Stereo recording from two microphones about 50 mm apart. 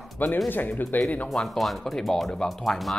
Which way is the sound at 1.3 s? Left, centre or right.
Centre.